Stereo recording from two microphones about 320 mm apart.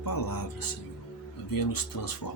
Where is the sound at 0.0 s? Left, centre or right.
Left.